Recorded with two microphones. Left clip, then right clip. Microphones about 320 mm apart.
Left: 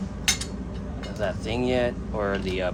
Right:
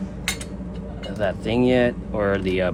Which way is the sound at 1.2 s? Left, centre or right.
Right.